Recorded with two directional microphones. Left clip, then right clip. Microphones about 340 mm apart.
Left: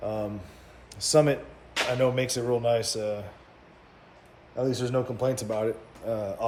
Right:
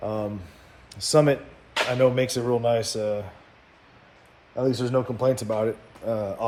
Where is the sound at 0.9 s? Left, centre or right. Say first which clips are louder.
Right 2 dB; centre.